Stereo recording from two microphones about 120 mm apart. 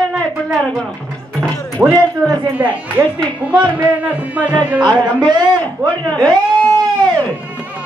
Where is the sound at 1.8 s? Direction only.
15° right (ahead or behind).